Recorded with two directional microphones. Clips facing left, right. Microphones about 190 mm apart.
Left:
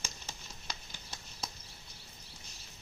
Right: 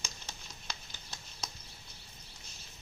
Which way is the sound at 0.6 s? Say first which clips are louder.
Left 1 dB; 10° left (ahead or behind).